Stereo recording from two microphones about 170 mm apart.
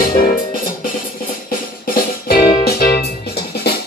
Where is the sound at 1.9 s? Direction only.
60° left (ahead or behind).